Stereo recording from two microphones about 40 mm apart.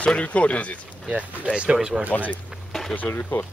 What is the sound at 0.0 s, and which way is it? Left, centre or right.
Speech, left.